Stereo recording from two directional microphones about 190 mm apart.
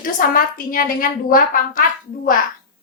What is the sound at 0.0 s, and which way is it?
A child's voice, 45° left (ahead or behind).